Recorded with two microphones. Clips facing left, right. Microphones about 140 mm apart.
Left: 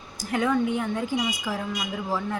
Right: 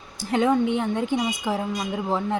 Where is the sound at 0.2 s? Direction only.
25° right (ahead or behind).